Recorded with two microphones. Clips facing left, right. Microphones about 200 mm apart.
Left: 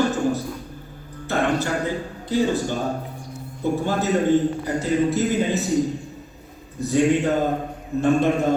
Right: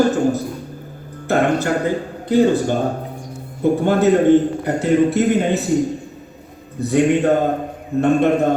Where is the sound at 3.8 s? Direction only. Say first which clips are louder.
Right 8 dB; 60° right (ahead or behind).